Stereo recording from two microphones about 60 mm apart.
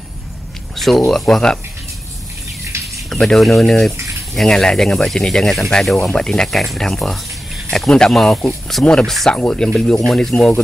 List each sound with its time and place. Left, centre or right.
0.7 s speech: centre
3.1 s speech: centre
3.9 s a sound: right
4.3 s speech: centre
10.3 s speech: centre